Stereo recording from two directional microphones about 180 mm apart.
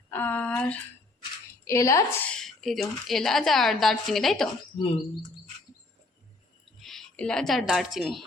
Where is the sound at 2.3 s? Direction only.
Centre (ahead or behind).